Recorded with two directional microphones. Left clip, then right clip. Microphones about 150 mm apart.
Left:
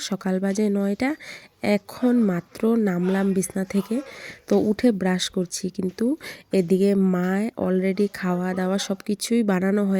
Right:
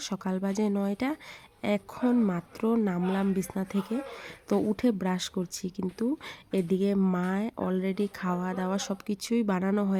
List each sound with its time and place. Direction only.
0.0 s speech: 25° left (ahead or behind)